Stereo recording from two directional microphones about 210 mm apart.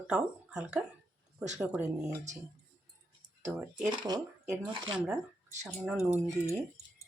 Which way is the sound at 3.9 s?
20° right (ahead or behind).